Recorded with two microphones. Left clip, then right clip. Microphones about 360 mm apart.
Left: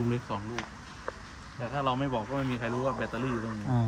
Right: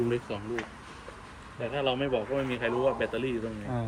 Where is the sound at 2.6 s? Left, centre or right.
Centre.